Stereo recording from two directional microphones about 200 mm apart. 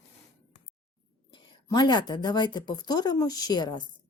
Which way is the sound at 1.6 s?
20° left (ahead or behind).